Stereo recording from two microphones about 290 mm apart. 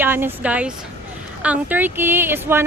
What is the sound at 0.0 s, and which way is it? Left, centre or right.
Speech, centre.